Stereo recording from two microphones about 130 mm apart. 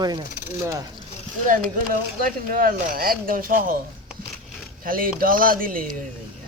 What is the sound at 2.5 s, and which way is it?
Speech, 90° right.